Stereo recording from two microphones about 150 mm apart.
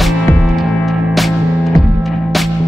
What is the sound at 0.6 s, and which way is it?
Music, centre (ahead or behind).